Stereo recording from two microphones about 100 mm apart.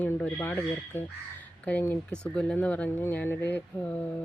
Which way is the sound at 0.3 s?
20° left (ahead or behind).